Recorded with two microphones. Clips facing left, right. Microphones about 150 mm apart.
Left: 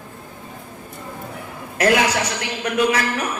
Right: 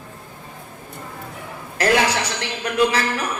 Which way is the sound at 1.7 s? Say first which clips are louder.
Left 1 dB; 30° right (ahead or behind).